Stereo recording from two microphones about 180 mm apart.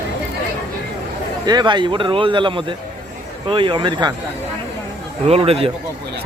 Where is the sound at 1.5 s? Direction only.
25° right (ahead or behind).